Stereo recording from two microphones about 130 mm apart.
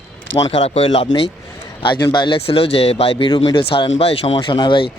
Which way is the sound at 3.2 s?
35° left (ahead or behind).